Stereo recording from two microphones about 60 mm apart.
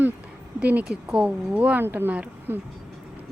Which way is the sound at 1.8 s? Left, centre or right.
Right.